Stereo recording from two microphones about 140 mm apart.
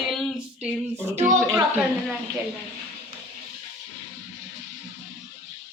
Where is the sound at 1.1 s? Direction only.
65° right (ahead or behind).